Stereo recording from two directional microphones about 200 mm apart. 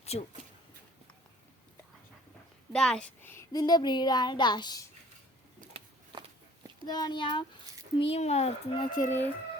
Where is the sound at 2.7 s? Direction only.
5° left (ahead or behind); by 4.8 s 20° left (ahead or behind).